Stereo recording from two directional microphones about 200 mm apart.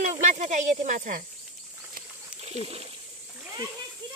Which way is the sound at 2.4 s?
30° right (ahead or behind).